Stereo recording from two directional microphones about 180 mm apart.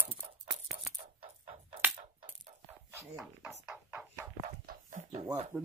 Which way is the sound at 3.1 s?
5° right (ahead or behind).